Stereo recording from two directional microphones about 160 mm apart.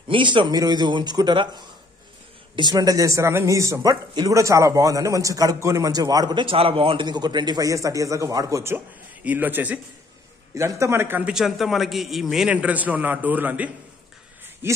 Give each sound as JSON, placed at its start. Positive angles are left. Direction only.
{"t": 0.1, "sound": "a man's voice", "side_deg": -30}